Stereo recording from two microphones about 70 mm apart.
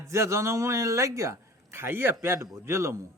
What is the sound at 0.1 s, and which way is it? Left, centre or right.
A man's voice, right.